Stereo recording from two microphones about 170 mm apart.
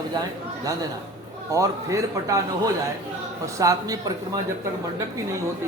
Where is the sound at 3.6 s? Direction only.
20° right (ahead or behind).